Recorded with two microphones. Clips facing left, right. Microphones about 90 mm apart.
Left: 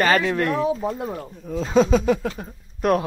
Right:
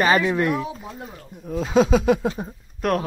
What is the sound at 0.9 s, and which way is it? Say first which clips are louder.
Speech: left 9 dB; 90° left.